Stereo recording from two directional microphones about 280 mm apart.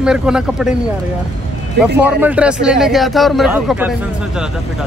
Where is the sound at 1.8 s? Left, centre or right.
Centre.